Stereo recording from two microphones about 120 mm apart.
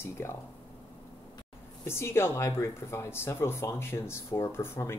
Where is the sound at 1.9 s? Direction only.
20° left (ahead or behind).